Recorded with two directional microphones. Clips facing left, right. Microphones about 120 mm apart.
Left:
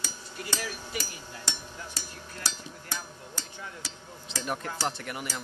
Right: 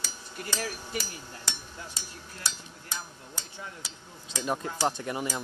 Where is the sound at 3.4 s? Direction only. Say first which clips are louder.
Even; 20° right (ahead or behind).